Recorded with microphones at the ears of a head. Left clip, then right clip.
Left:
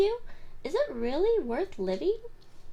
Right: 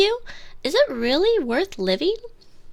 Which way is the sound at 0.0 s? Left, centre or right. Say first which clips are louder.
Right 7 dB; right.